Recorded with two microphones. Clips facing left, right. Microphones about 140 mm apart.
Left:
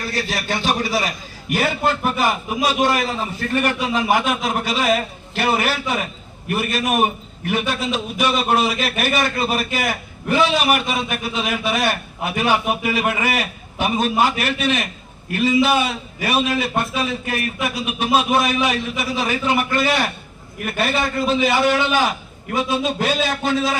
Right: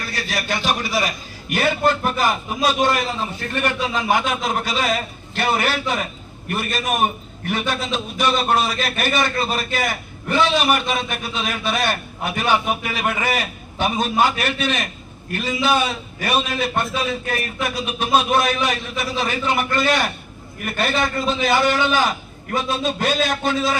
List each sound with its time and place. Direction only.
0.3 s a man's voice: 30° left (ahead or behind)
1.5 s a man's voice: centre (ahead or behind)